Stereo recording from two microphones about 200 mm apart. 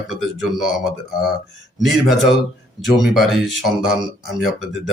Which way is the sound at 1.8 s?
Centre (ahead or behind).